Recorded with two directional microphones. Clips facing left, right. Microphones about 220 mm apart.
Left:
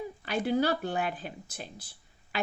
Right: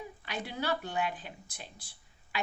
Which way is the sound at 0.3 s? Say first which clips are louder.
Left 8 dB; 45° left (ahead or behind).